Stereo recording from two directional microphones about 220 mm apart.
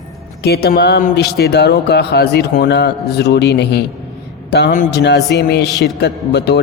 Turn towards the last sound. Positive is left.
turn(degrees=50)  # may be behind; listen again after turning